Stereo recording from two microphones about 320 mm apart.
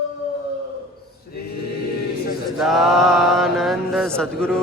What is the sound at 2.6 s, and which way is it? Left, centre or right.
Mantra, centre.